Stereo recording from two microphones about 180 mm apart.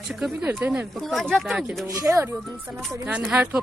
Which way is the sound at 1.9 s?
15° right (ahead or behind).